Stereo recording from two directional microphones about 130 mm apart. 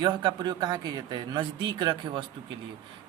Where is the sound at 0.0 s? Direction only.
35° right (ahead or behind).